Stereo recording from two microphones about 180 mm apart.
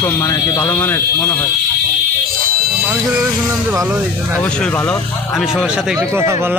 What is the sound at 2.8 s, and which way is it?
A man's voice, 15° right (ahead or behind).